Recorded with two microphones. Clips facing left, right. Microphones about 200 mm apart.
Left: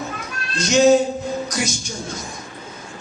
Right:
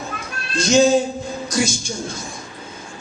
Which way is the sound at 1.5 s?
30° right (ahead or behind).